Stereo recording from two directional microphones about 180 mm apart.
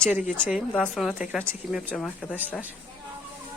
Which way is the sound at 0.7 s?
5° left (ahead or behind).